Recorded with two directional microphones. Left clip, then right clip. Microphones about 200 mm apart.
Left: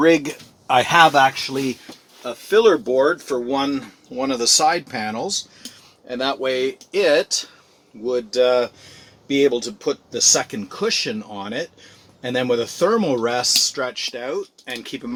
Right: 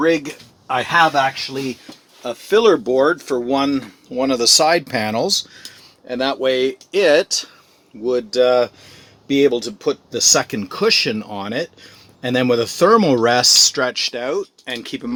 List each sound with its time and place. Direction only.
0.0 s speech: 30° left (ahead or behind)
2.2 s speech: 45° right (ahead or behind); by 15.1 s 30° right (ahead or behind)